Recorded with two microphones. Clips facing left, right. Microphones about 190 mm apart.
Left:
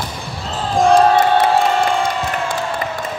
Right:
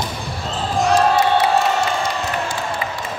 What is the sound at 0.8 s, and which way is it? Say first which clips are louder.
Basketball bounce: left 4 dB; 55° left (ahead or behind).